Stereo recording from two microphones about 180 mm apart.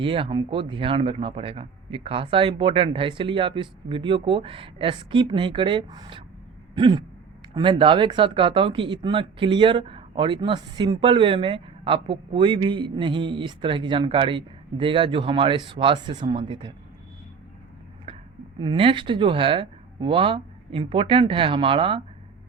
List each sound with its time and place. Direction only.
0.0 s speech: 30° right (ahead or behind)
6.7 s a sound: 25° right (ahead or behind)
7.5 s speech: 25° right (ahead or behind)
18.6 s speech: 30° right (ahead or behind)